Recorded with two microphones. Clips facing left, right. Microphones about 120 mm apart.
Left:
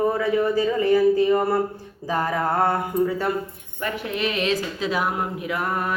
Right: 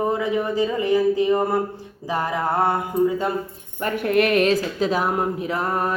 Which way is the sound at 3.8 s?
50° right (ahead or behind).